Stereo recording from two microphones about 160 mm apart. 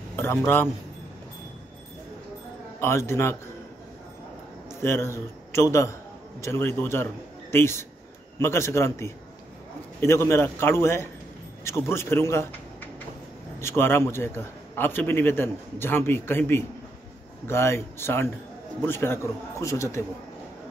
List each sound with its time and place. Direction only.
0.1 s speech: 15° left (ahead or behind)
2.8 s a man's voice: 15° left (ahead or behind)
4.6 s a man's voice: 15° left (ahead or behind)
13.6 s a man's voice: 15° left (ahead or behind)